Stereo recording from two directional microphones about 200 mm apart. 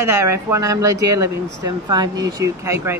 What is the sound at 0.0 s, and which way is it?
Speech, 15° right (ahead or behind).